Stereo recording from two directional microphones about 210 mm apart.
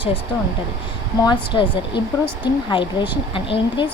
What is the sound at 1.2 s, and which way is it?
Speech, 20° left (ahead or behind).